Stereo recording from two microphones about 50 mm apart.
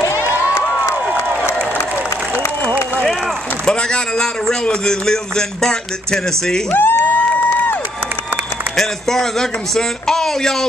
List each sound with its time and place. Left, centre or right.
3.6 s a man's voice: centre
6.7 s speech: left
8.7 s a man's voice: centre